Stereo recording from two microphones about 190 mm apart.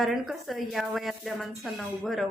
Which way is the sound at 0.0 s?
Centre (ahead or behind).